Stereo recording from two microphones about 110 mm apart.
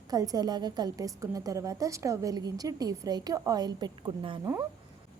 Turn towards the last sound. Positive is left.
turn(degrees=-30)  # may be behind; listen again after turning